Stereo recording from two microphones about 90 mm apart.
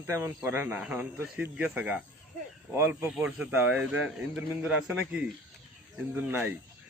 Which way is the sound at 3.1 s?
10° right (ahead or behind).